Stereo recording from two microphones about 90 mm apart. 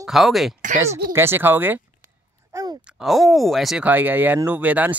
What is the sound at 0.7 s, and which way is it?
Speech, 25° right (ahead or behind).